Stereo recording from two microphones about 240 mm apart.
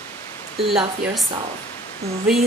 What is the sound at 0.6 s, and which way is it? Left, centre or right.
Speech, centre.